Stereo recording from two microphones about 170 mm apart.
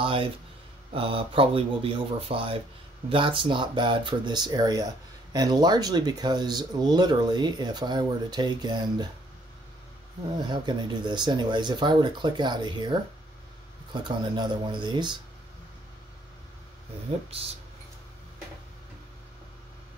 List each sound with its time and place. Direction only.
0.0 s speech: 30° right (ahead or behind)
10.4 s speech: 25° right (ahead or behind)
13.9 s speech: 25° right (ahead or behind)